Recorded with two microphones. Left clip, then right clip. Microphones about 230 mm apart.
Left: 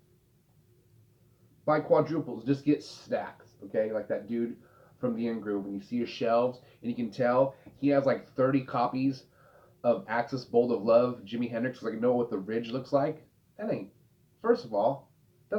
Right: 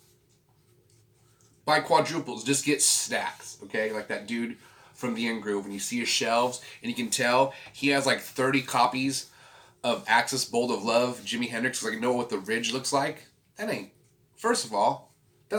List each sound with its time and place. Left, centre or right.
1.6 s speech: right
14.4 s speech: right